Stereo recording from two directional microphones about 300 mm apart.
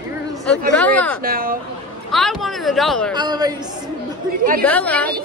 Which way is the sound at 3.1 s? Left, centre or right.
Centre.